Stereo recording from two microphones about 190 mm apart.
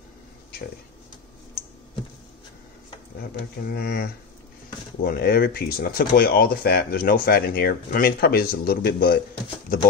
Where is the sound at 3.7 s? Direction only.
55° left (ahead or behind).